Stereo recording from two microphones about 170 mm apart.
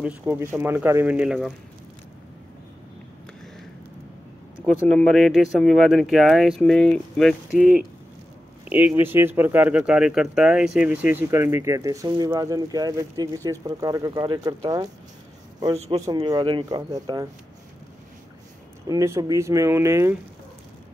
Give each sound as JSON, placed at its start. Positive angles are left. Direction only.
{"t": 0.0, "sound": "speech", "side_deg": -15}
{"t": 4.6, "sound": "speech", "side_deg": 5}
{"t": 15.9, "sound": "speech", "side_deg": -25}
{"t": 18.9, "sound": "speech", "side_deg": -20}